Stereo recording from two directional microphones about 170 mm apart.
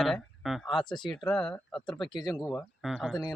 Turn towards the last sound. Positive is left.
turn(degrees=0)  # may be behind; listen again after turning